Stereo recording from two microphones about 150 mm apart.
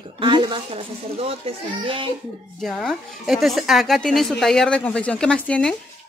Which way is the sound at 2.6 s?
Centre (ahead or behind).